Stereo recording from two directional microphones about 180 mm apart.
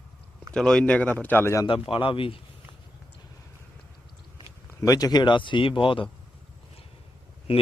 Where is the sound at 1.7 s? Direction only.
30° left (ahead or behind).